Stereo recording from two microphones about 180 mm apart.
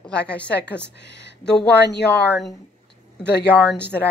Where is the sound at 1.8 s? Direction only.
65° left (ahead or behind).